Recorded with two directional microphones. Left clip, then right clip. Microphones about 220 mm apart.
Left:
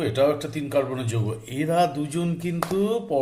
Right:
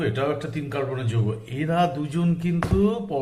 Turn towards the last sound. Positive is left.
turn(degrees=45)  # may be behind; listen again after turning